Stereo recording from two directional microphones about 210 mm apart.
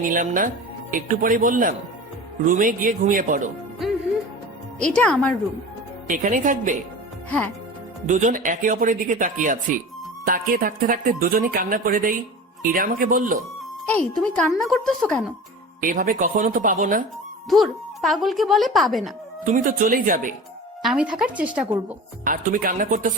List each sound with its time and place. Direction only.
0.0 s speech: 40° right (ahead or behind)
4.8 s speech: 5° left (ahead or behind)
6.1 s speech: 35° right (ahead or behind)
7.3 s speech: 5° left (ahead or behind)
8.0 s speech: 35° right (ahead or behind)
14.2 s speech: centre (ahead or behind)
15.8 s speech: 40° right (ahead or behind)
17.5 s speech: centre (ahead or behind)
19.5 s speech: 40° right (ahead or behind)
20.8 s speech: 5° right (ahead or behind)
22.2 s speech: 40° right (ahead or behind)